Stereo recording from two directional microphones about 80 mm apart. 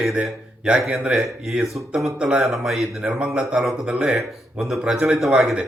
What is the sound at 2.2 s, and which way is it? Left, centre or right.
Speech, centre.